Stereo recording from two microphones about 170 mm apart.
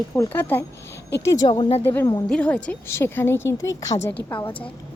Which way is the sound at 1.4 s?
30° left (ahead or behind).